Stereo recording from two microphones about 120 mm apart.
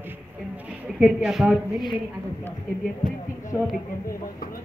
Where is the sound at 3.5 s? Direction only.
25° left (ahead or behind).